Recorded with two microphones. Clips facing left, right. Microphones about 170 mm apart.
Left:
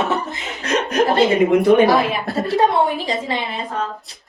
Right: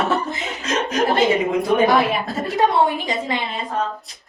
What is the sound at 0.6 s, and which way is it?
Chuckle, 65° left (ahead or behind).